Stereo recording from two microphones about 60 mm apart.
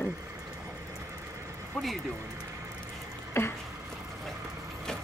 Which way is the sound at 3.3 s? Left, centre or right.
Left.